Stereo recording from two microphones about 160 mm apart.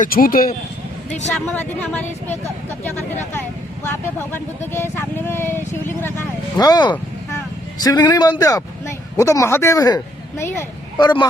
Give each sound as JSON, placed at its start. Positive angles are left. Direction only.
{"t": 0.0, "sound": "speech", "side_deg": 65}
{"t": 1.5, "sound": "speech", "side_deg": 10}
{"t": 4.7, "sound": "speech", "side_deg": 15}